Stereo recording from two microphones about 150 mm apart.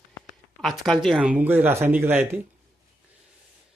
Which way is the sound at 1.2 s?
10° right (ahead or behind).